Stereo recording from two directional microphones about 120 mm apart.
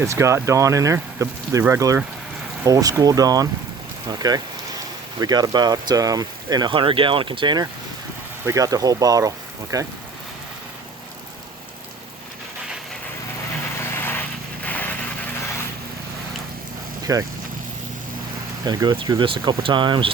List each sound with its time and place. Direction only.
0.0 s speech: 25° right (ahead or behind); by 7.6 s 40° right (ahead or behind)
8.4 s speech: 30° right (ahead or behind)
13.7 s vehicle: 20° left (ahead or behind)
17.0 s vehicle: 30° right (ahead or behind)
18.6 s speech: 35° right (ahead or behind)